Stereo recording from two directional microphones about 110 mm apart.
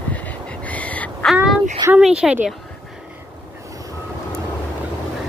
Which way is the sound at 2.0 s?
5° right (ahead or behind).